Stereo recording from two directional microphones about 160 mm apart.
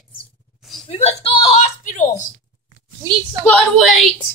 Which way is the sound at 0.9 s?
40° left (ahead or behind).